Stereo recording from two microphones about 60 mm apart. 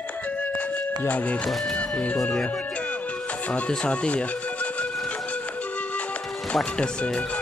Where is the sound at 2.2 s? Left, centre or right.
Centre.